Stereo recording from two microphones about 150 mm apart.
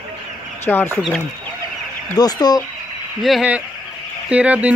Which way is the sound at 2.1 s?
25° left (ahead or behind).